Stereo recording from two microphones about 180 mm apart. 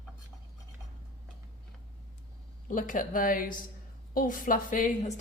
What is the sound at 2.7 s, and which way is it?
A woman's voice, 50° left (ahead or behind).